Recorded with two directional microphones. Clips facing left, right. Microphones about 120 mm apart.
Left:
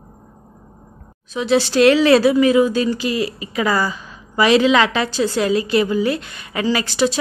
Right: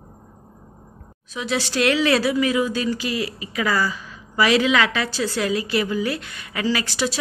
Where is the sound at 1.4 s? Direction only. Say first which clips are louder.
Left 8 dB; 30° left (ahead or behind).